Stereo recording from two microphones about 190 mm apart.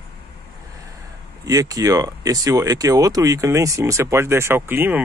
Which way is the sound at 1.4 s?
20° right (ahead or behind).